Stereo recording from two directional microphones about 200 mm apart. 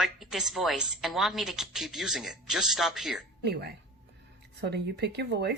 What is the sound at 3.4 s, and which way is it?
Speech, 55° right (ahead or behind).